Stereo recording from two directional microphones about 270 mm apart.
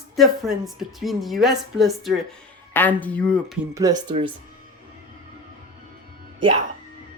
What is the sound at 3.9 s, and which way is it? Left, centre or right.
Speech, right.